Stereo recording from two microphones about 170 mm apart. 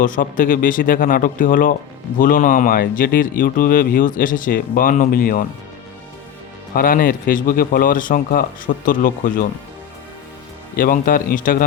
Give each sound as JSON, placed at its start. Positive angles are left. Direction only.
{"t": 0.0, "sound": "speech", "side_deg": 50}
{"t": 6.7, "sound": "speech", "side_deg": 55}
{"t": 10.8, "sound": "speech", "side_deg": 55}